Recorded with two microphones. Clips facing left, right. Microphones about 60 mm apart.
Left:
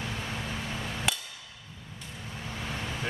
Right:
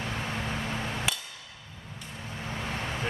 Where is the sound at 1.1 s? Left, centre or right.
Centre.